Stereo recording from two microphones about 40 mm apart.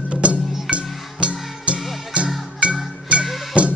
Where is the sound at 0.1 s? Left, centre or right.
Right.